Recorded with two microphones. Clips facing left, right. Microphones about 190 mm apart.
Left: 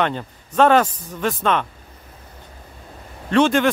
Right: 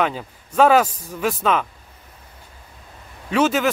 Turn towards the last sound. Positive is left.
turn(degrees=-5)  # may be behind; listen again after turning